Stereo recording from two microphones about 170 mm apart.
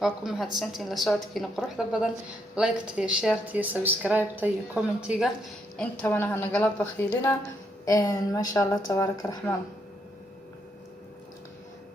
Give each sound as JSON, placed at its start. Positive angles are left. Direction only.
{"t": 0.0, "sound": "a woman's voice", "side_deg": 0}
{"t": 5.7, "sound": "a woman's voice", "side_deg": 10}